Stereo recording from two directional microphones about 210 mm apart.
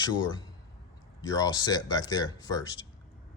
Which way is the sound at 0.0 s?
20° left (ahead or behind).